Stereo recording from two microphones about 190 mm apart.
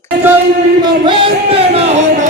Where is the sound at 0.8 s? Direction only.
25° right (ahead or behind).